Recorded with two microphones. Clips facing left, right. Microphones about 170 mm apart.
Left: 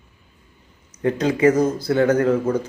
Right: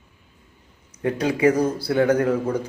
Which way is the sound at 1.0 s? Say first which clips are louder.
Left 2 dB; 10° right (ahead or behind).